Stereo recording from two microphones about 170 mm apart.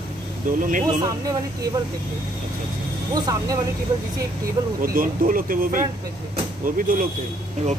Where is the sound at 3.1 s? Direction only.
20° right (ahead or behind).